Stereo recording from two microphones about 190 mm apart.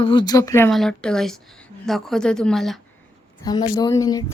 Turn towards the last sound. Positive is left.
turn(degrees=20)  # may be behind; listen again after turning